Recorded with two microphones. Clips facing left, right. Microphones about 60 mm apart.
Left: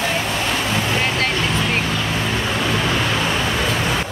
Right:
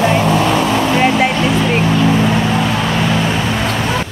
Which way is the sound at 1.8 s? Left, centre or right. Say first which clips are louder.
Right 9 dB; right.